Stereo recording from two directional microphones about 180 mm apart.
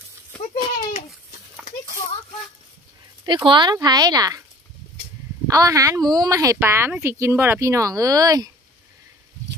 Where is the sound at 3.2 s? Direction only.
25° right (ahead or behind).